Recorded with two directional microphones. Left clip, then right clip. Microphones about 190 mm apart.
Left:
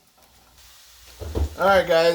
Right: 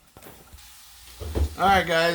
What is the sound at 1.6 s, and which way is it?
Speech, 35° right (ahead or behind).